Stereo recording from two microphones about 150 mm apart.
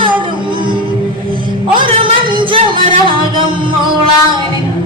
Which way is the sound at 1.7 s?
35° right (ahead or behind).